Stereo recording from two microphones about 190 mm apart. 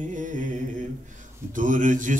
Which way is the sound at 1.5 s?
45° right (ahead or behind).